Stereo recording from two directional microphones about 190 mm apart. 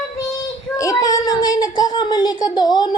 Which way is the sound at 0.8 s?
20° left (ahead or behind).